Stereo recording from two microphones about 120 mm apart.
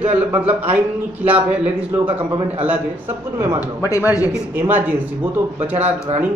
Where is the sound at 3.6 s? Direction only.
25° left (ahead or behind).